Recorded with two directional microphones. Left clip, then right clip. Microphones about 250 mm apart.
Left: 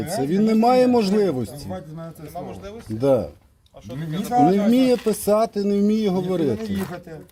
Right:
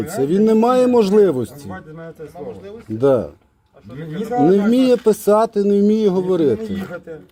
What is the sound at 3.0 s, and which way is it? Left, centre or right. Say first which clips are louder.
Speech: right 4 dB; centre.